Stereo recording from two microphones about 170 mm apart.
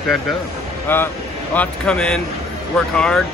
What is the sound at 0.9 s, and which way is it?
Speech, 10° left (ahead or behind).